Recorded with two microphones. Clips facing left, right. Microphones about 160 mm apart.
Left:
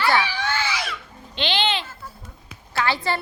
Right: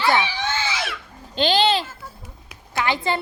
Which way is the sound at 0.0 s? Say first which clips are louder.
Right 1 dB; 20° right (ahead or behind).